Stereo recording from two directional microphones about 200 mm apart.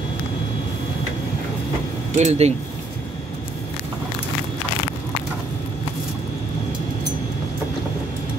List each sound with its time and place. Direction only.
2.1 s speech: 35° right (ahead or behind)